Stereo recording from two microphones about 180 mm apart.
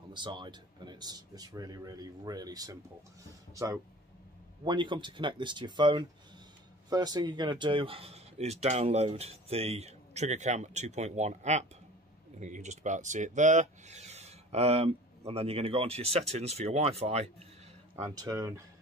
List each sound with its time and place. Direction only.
0.1 s speech: 25° right (ahead or behind)
18.1 s speech: 20° right (ahead or behind)